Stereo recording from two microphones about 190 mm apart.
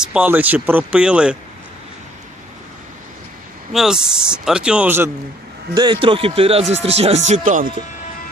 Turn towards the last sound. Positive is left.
turn(degrees=-40)  # may be behind; listen again after turning